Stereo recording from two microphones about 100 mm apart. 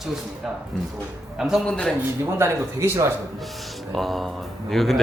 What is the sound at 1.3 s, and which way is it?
Speech, 5° right (ahead or behind).